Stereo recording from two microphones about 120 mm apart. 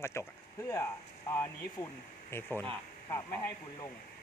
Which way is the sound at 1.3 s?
25° left (ahead or behind).